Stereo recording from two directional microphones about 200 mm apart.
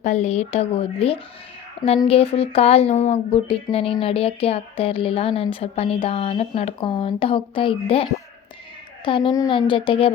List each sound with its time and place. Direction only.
0.0 s speech: 35° left (ahead or behind)
9.0 s speech: 25° left (ahead or behind)